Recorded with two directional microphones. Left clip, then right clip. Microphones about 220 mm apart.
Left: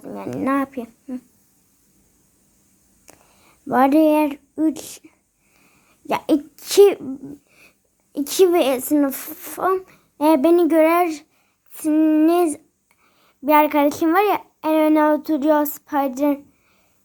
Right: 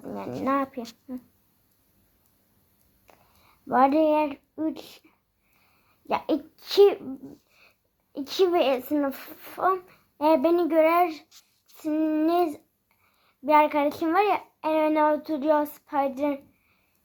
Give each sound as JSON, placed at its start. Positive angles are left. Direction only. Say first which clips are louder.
{"t": 0.0, "sound": "speech", "louder": "left 5 dB", "side_deg": 30}
{"t": 3.1, "sound": "a woman's voice", "louder": "left 6 dB", "side_deg": 35}
{"t": 8.1, "sound": "a woman's voice", "louder": "left 7 dB", "side_deg": 35}